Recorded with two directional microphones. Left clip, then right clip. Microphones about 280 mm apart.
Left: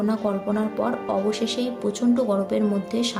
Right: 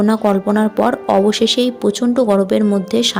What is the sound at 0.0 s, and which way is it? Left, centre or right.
A woman's voice, right.